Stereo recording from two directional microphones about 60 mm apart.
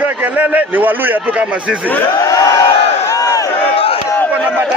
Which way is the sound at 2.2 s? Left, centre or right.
Left.